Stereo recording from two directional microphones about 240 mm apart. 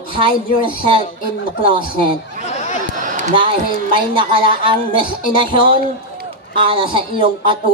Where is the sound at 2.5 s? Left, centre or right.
Left.